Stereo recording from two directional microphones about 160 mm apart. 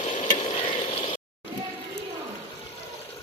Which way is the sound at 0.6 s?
30° left (ahead or behind).